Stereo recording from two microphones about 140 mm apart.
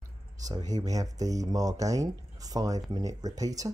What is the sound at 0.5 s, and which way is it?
Speech, 30° right (ahead or behind).